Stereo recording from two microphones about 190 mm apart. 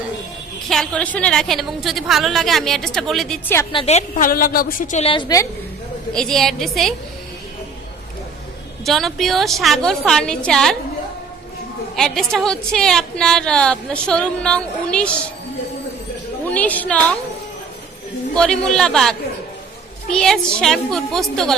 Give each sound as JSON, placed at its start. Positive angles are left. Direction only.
{"t": 0.7, "sound": "a woman's voice", "side_deg": 5}
{"t": 3.6, "sound": "a woman's voice", "side_deg": 25}
{"t": 6.1, "sound": "a woman's voice", "side_deg": 0}
{"t": 8.8, "sound": "a woman's voice", "side_deg": 0}
{"t": 11.9, "sound": "a woman's voice", "side_deg": 0}
{"t": 16.5, "sound": "a woman's voice", "side_deg": 10}
{"t": 18.3, "sound": "a woman's voice", "side_deg": 5}